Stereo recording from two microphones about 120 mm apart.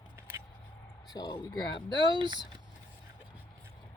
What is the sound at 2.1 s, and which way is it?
Speech, 40° right (ahead or behind).